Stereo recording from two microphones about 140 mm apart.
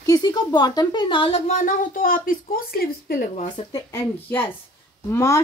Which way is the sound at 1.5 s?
70° left (ahead or behind).